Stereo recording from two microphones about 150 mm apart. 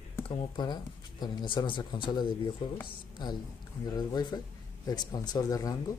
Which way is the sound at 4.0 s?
25° left (ahead or behind).